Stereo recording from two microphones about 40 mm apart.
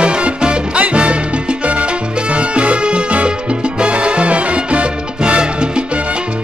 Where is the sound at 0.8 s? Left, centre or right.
Right.